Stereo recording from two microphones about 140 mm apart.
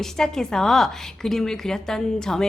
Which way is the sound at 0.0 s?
5° left (ahead or behind).